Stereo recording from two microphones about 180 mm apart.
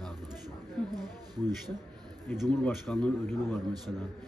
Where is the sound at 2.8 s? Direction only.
Centre (ahead or behind).